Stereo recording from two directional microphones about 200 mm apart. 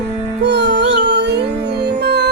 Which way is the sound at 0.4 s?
60° right (ahead or behind).